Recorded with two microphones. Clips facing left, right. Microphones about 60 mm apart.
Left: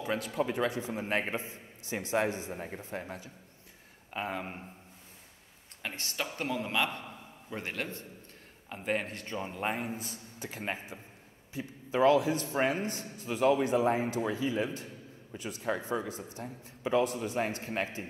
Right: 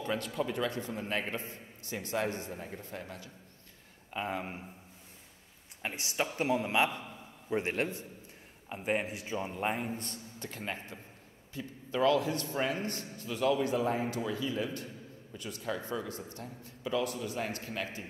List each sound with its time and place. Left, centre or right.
0.0 s speech: centre
1.0 s a man's voice: left
4.1 s a man's voice: centre
5.8 s speech: centre
8.7 s a man's voice: centre
10.6 s a man's voice: centre
12.5 s a man's voice: left
12.8 s a man's voice: centre
16.8 s a man's voice: left